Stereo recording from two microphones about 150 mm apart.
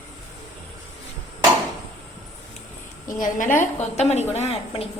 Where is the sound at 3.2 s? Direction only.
60° left (ahead or behind); by 4.9 s 40° left (ahead or behind).